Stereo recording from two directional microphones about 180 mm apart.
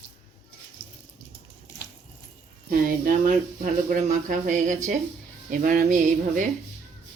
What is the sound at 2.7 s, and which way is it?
Speech, 50° right (ahead or behind).